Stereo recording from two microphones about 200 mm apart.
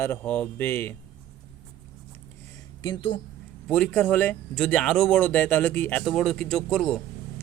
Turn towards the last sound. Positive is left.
turn(degrees=5)  # may be behind; listen again after turning